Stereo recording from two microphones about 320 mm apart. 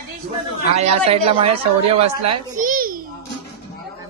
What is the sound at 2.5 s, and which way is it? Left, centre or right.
Babbling, right.